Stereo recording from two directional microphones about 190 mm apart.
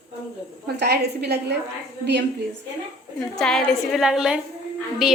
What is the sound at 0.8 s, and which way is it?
Speech, 60° right (ahead or behind).